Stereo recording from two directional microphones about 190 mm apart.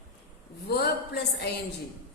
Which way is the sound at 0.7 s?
60° left (ahead or behind).